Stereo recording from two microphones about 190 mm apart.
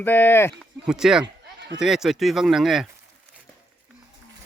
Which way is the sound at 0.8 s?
5° right (ahead or behind).